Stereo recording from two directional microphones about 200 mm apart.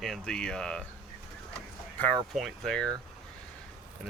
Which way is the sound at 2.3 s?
Centre (ahead or behind).